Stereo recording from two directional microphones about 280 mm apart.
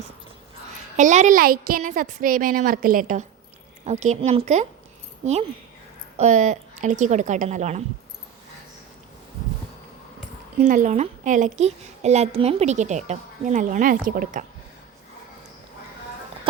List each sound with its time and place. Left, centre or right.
0.9 s a woman's voice: right
10.6 s a woman's voice: right